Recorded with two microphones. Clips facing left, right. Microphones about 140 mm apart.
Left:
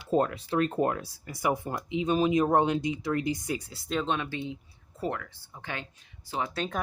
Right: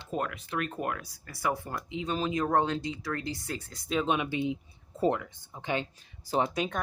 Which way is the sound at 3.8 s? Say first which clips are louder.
Right 4 dB; centre (ahead or behind).